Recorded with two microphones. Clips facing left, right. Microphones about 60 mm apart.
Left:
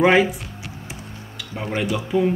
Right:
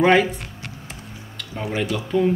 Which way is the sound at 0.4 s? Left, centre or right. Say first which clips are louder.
Even; right.